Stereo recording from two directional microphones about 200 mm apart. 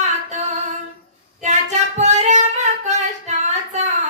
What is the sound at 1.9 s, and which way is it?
Music, 35° right (ahead or behind).